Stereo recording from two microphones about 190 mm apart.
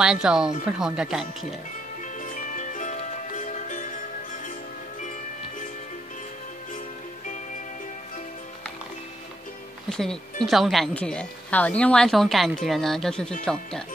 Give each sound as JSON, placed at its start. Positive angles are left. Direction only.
{"t": 0.0, "sound": "a woman's voice", "side_deg": -5}
{"t": 2.1, "sound": "music", "side_deg": 45}
{"t": 9.8, "sound": "a woman's voice", "side_deg": 5}